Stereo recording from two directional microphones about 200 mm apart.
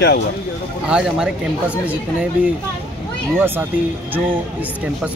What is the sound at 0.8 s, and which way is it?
Speech, 5° right (ahead or behind).